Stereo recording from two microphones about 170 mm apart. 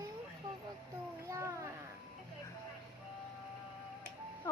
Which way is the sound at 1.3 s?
15° right (ahead or behind).